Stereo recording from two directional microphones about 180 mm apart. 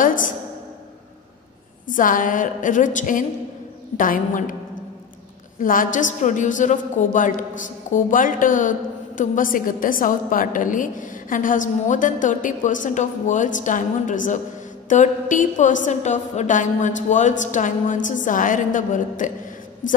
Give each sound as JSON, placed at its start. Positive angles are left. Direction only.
{"t": 0.0, "sound": "a sound", "side_deg": 50}
{"t": 1.9, "sound": "a woman's voice", "side_deg": 45}
{"t": 5.6, "sound": "a woman's voice", "side_deg": 50}